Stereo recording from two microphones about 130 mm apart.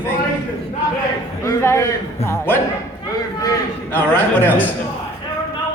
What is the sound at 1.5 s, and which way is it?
A man's voice, 20° left (ahead or behind).